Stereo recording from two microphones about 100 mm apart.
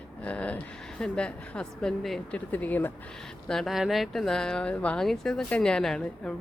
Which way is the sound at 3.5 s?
Centre (ahead or behind).